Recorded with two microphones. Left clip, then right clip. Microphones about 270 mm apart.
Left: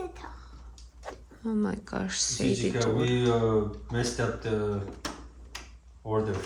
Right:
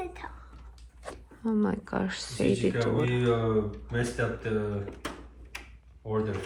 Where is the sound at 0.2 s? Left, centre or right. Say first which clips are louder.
Right 2 dB; centre.